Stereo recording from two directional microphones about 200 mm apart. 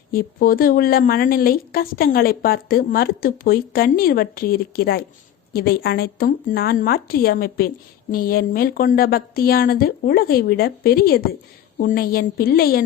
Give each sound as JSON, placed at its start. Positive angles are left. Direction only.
{"t": 0.1, "sound": "a woman's voice", "side_deg": 45}